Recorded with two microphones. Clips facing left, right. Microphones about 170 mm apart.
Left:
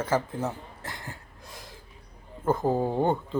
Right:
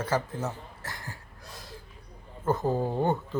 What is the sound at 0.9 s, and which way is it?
Cough, 20° left (ahead or behind).